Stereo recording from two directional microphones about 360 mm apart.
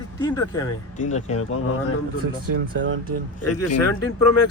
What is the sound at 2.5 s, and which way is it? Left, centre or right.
Speech, right.